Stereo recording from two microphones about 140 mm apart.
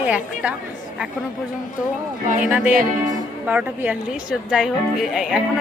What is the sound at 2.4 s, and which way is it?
A woman's voice, 5° right (ahead or behind).